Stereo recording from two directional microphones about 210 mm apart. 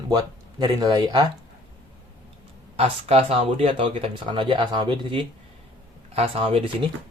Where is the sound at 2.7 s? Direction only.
30° right (ahead or behind).